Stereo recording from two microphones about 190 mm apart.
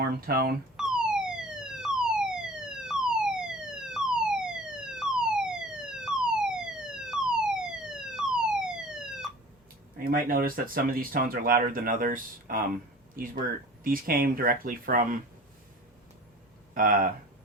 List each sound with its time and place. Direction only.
0.3 s speech: 50° right (ahead or behind)
0.8 s police car: 5° right (ahead or behind)
10.0 s speech: 50° right (ahead or behind)
13.8 s speech: 50° right (ahead or behind)
16.7 s speech: 45° right (ahead or behind)